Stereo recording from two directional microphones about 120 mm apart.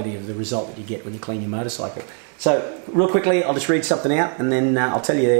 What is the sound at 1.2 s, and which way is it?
Speech, 15° right (ahead or behind).